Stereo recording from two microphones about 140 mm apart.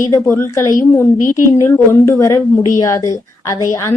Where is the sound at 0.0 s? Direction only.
20° left (ahead or behind).